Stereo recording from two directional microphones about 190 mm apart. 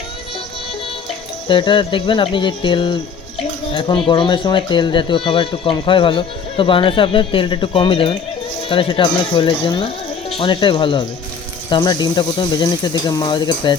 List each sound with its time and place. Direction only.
1.5 s speech: 25° left (ahead or behind)